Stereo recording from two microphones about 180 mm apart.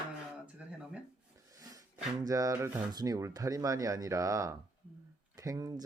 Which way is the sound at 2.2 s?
20° right (ahead or behind).